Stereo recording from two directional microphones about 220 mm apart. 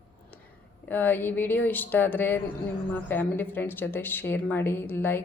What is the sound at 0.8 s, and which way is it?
Speech, 10° left (ahead or behind).